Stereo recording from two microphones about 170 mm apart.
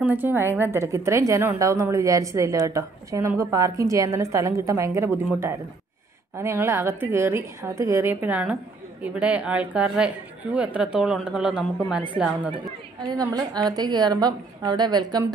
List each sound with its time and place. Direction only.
0.0 s a woman's voice: 10° right (ahead or behind)
6.3 s a woman's voice: 15° right (ahead or behind)
13.0 s a woman's voice: 25° right (ahead or behind)